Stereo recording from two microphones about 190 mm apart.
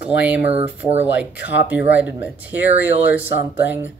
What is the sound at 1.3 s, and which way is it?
Speech, 70° left (ahead or behind).